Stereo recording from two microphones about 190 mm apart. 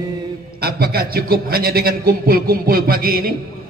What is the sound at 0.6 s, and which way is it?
A man's voice, 55° right (ahead or behind).